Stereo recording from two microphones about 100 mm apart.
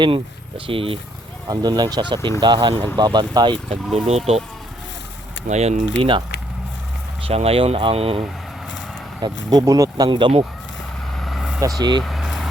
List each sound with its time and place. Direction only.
0.0 s speech: 65° right (ahead or behind)
1.5 s speech: 45° right (ahead or behind)
3.9 s speech: 90° right
5.5 s speech: 90° right
7.2 s speech: 80° right
9.2 s speech: 40° right (ahead or behind)
10.1 s speech: 55° right (ahead or behind)
11.2 s vehicle: centre (ahead or behind)
11.8 s speech: 45° right (ahead or behind)
12.0 s vehicle: centre (ahead or behind)